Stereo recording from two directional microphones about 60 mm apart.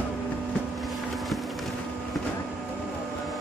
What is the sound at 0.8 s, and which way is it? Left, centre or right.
Boat, centre.